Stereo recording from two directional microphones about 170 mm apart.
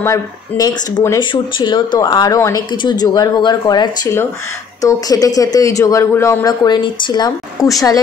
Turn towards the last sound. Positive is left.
turn(degrees=25)  # may be behind; listen again after turning